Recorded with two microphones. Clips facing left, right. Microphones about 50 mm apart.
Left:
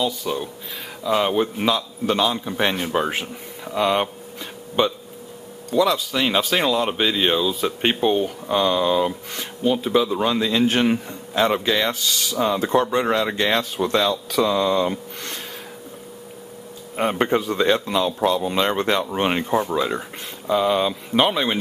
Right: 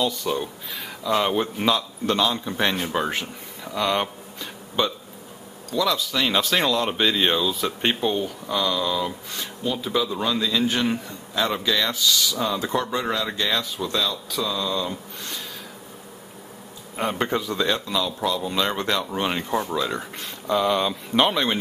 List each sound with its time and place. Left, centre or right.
0.0 s a man's voice: centre
5.7 s speech: left
12.4 s speech: left
13.5 s speech: left
16.9 s speech: left
19.4 s speech: centre
20.0 s speech: centre